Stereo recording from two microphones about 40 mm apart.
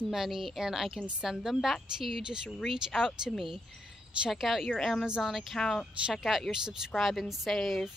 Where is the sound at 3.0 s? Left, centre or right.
Centre.